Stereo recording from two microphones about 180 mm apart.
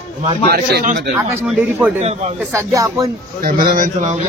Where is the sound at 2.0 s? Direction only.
35° right (ahead or behind).